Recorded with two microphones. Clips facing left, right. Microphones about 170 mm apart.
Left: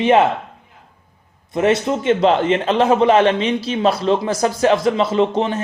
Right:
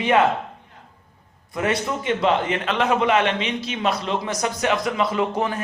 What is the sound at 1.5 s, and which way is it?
Speech, 25° left (ahead or behind).